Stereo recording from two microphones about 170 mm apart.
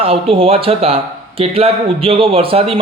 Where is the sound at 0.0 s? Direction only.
35° right (ahead or behind).